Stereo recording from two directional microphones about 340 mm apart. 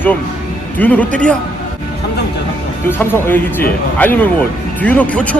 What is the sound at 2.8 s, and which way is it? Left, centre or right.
Speech, centre.